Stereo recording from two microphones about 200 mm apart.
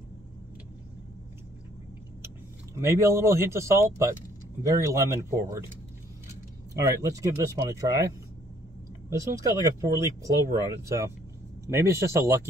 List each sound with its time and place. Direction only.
2.2 s speech: 15° right (ahead or behind)
6.7 s speech: 15° right (ahead or behind)
9.1 s speech: 15° right (ahead or behind)
11.6 s speech: 15° right (ahead or behind)